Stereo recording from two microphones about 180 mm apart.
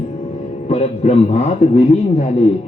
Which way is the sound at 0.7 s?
35° left (ahead or behind).